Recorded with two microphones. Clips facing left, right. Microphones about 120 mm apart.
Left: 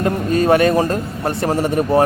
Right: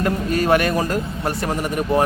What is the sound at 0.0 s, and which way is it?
Speech, 30° left (ahead or behind).